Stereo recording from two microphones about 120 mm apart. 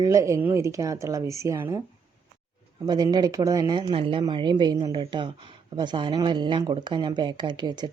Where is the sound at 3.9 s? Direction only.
50° right (ahead or behind).